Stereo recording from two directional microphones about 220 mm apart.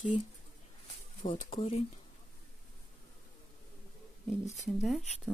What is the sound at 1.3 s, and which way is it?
Speech, 25° left (ahead or behind).